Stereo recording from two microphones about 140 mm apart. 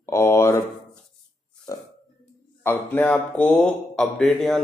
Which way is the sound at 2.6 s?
10° left (ahead or behind).